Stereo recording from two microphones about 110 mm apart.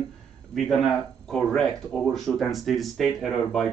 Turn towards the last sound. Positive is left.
turn(degrees=0)  # may be behind; listen again after turning